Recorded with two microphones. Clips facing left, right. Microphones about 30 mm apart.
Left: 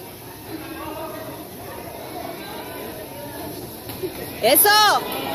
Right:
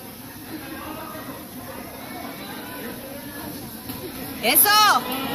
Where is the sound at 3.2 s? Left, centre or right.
Left.